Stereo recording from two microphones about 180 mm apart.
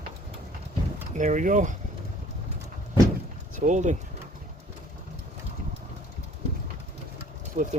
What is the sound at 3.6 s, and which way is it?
Speech, 40° right (ahead or behind).